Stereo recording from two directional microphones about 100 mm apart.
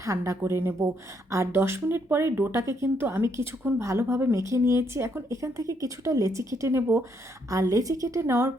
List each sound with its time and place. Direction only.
0.0 s a woman's voice: 30° right (ahead or behind)